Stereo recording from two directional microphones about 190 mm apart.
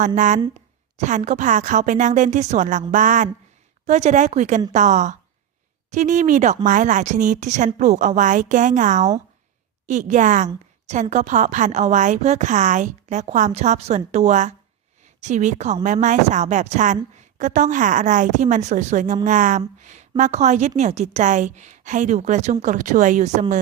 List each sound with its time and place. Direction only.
0.2 s a woman's voice: 40° right (ahead or behind)
2.9 s a sound: 45° right (ahead or behind)
3.8 s a woman's voice: 35° right (ahead or behind)